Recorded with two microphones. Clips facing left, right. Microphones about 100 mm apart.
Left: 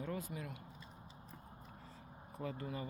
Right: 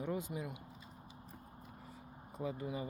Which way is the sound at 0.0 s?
20° right (ahead or behind).